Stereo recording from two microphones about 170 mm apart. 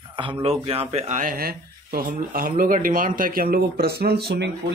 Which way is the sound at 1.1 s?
50° right (ahead or behind).